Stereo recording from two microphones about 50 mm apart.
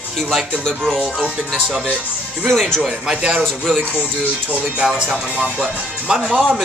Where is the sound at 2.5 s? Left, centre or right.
Centre.